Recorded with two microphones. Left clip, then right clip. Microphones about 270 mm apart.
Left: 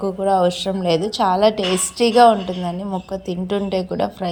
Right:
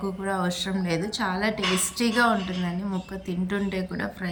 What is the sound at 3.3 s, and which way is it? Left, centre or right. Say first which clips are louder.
Speech: left 7 dB; centre.